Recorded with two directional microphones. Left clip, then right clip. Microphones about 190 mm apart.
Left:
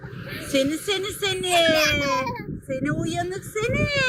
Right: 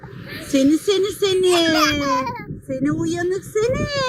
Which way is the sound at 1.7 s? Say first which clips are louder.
Right 3 dB; centre (ahead or behind).